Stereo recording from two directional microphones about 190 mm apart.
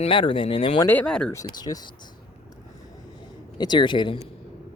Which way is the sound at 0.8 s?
5° left (ahead or behind).